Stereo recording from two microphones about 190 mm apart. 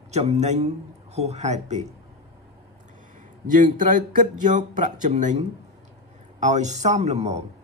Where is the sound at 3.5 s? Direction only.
45° right (ahead or behind).